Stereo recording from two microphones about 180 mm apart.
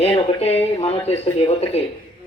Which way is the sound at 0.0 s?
35° left (ahead or behind).